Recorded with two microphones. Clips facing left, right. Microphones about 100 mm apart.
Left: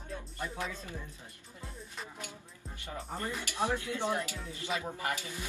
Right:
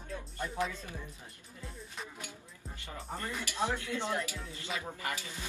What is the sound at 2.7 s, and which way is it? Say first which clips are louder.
Music: left 3 dB; 20° left (ahead or behind).